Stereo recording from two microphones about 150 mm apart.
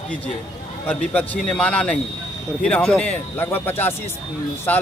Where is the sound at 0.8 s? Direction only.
10° left (ahead or behind).